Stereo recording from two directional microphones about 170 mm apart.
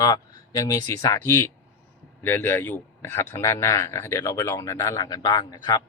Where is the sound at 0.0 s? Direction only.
20° left (ahead or behind).